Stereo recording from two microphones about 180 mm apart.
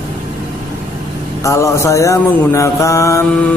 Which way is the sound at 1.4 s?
15° left (ahead or behind).